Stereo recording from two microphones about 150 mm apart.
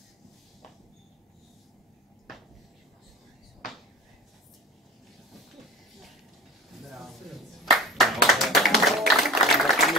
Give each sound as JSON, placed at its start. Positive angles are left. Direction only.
{"t": 6.9, "sound": "music", "side_deg": 0}
{"t": 7.7, "sound": "clapping", "side_deg": 0}